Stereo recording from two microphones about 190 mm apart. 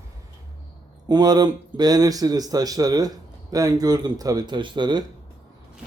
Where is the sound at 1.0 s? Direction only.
20° right (ahead or behind).